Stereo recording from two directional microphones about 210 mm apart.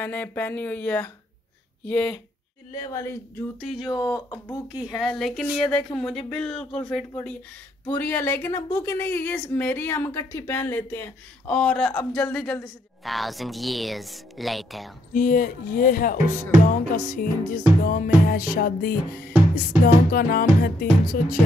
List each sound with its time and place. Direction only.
0.0 s a woman's voice: 10° left (ahead or behind)
4.7 s a woman's voice: centre (ahead or behind)
15.1 s speech: 40° left (ahead or behind)
20.1 s music: 45° left (ahead or behind)
21.1 s speech: 40° left (ahead or behind)